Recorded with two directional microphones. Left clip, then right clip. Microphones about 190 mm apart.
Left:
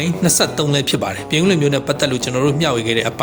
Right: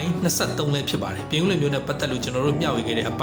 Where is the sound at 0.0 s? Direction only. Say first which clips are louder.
Left 8 dB; 45° left (ahead or behind).